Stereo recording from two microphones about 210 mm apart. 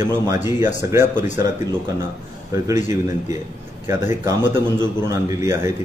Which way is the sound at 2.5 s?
15° right (ahead or behind).